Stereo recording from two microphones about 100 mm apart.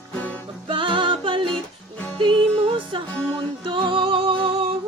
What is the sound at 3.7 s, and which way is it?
Music, 55° right (ahead or behind).